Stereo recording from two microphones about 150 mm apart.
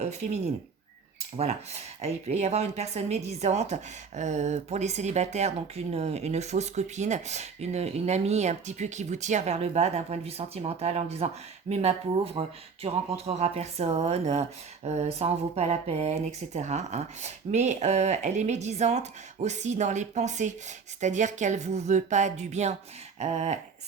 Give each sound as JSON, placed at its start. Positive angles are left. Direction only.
{"t": 0.0, "sound": "speech", "side_deg": -45}
{"t": 2.0, "sound": "a woman's voice", "side_deg": -50}